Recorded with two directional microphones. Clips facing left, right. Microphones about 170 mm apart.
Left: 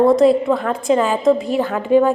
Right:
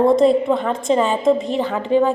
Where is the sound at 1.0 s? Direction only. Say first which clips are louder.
Left 1 dB; 25° right (ahead or behind).